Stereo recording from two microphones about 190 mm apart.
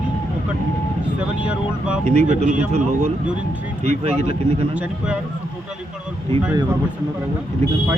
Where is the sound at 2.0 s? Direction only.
40° right (ahead or behind).